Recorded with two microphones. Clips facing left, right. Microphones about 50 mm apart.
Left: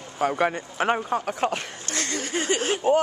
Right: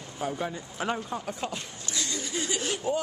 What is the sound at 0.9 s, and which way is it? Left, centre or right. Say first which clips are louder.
Speech: left 7 dB; left.